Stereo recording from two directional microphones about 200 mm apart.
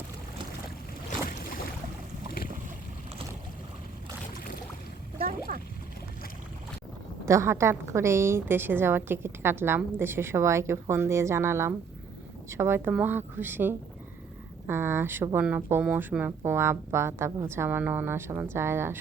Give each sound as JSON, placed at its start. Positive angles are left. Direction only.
{"t": 1.3, "sound": "boat", "side_deg": 45}
{"t": 5.1, "sound": "a sound", "side_deg": -45}
{"t": 7.3, "sound": "a woman's voice", "side_deg": -15}